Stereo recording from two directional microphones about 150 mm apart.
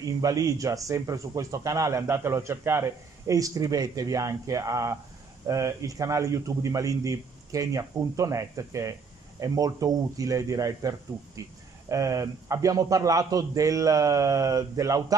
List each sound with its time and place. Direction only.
0.0 s speech: 25° right (ahead or behind)